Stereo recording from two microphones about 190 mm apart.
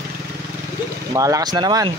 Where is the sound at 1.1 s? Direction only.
15° right (ahead or behind).